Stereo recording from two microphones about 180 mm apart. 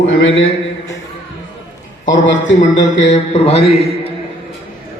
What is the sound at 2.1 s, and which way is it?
Speech, 90° left.